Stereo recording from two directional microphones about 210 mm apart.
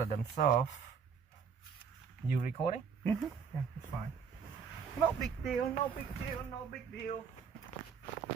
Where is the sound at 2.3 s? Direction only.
40° left (ahead or behind).